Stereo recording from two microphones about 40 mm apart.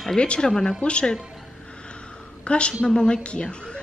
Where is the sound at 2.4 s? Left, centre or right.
Left.